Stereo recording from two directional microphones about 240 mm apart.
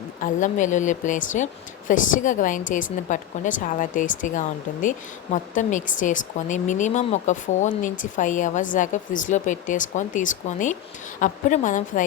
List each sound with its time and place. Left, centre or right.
0.2 s a woman's voice: left